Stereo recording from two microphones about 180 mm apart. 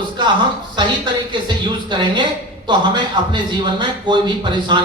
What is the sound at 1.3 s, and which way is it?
A man's voice, 25° right (ahead or behind).